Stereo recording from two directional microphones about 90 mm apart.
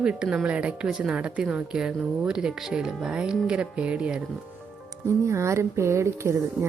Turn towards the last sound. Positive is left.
turn(degrees=-30)  # may be behind; listen again after turning